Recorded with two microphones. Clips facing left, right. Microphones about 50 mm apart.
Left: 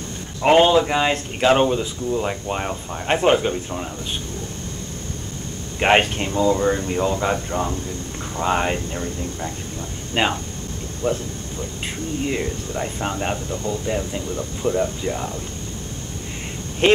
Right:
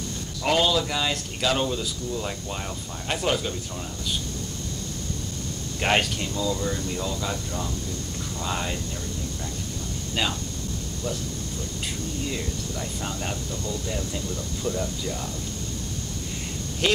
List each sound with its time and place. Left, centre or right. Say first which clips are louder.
0.4 s speech: left 8 dB; left
5.8 s speech: left 7 dB; left
16.8 s speech: left 8 dB; left